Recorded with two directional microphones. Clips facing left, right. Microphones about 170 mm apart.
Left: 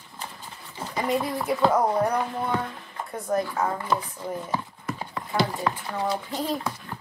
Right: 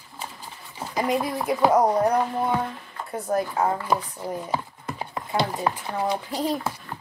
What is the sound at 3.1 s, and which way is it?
Speech, 30° right (ahead or behind).